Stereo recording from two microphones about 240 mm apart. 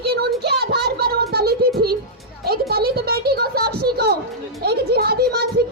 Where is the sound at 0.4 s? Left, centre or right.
Right.